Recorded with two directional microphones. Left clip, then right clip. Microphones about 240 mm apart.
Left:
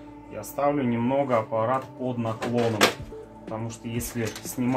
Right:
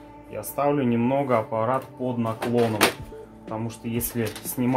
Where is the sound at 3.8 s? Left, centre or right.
Right.